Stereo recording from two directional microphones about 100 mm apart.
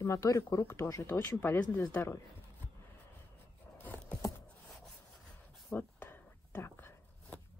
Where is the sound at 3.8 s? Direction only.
10° left (ahead or behind).